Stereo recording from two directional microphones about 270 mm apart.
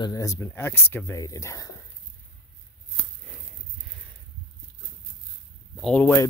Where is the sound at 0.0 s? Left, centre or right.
Centre.